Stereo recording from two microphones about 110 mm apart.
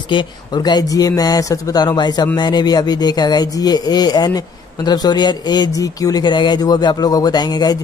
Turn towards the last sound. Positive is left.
turn(degrees=40)  # may be behind; listen again after turning